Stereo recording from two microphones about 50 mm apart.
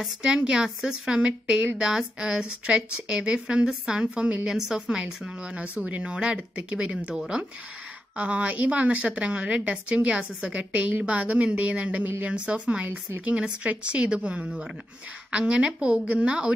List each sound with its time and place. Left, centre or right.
0.2 s a woman's voice: centre
4.5 s speech: centre
4.8 s a woman's voice: right